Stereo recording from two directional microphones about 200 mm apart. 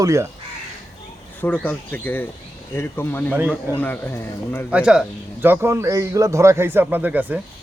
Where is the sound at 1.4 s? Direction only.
5° left (ahead or behind).